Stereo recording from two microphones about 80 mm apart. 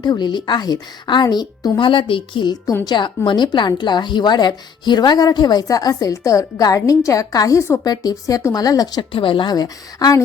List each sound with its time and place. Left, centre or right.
0.0 s a woman's voice: left
2.8 s a woman's voice: left